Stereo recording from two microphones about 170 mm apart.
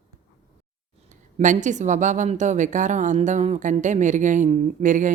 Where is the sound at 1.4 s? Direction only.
45° right (ahead or behind).